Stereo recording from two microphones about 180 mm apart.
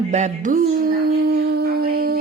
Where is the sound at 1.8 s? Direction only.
55° right (ahead or behind).